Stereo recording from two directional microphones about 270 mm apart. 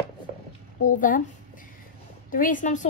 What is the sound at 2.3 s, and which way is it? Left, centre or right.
Speech, left.